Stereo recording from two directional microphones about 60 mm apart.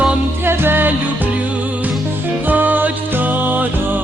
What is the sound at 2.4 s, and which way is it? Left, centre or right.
Music, right.